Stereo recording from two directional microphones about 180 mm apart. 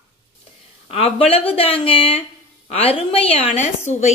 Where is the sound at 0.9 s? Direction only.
30° left (ahead or behind).